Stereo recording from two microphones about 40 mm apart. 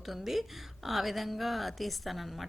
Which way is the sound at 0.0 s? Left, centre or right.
Centre.